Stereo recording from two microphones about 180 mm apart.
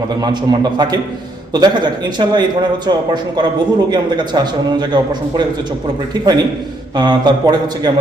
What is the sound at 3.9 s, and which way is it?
Speech, 25° right (ahead or behind).